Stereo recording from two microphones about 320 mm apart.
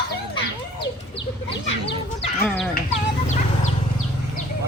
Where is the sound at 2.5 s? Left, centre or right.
Centre.